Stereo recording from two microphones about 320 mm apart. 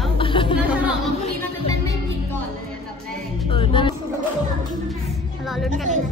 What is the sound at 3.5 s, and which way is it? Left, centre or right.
Speech, centre.